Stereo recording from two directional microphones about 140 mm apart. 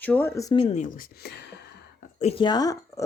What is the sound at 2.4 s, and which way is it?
Speech, 30° left (ahead or behind).